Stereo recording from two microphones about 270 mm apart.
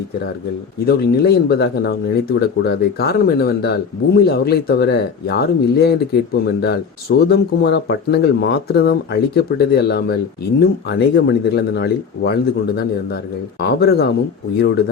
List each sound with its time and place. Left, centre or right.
0.9 s speech: left